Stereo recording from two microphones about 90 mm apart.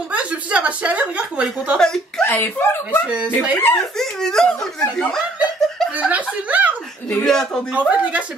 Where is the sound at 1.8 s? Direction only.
5° left (ahead or behind).